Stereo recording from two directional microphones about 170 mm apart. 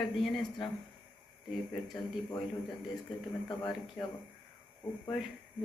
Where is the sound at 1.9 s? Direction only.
20° left (ahead or behind).